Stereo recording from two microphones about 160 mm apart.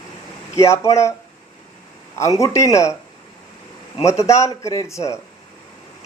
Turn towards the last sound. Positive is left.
turn(degrees=20)  # may be behind; listen again after turning